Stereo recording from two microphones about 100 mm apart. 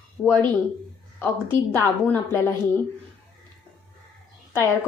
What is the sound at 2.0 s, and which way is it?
Speech, 25° left (ahead or behind).